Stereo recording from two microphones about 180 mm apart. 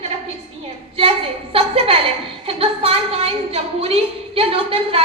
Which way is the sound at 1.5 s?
35° right (ahead or behind).